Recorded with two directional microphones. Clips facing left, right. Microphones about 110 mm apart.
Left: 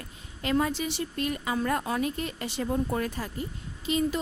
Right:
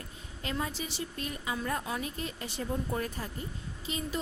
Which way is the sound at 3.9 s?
75° left (ahead or behind).